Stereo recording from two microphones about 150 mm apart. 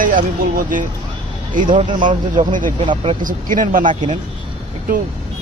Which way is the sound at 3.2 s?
65° right (ahead or behind).